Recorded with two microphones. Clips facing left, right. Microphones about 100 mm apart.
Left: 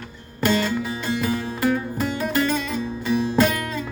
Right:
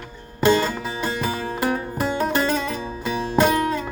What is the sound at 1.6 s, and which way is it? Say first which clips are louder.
Music: left 1 dB; 20° right (ahead or behind).